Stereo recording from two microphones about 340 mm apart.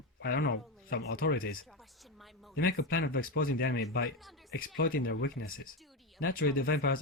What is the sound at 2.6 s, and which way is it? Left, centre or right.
Speech, left.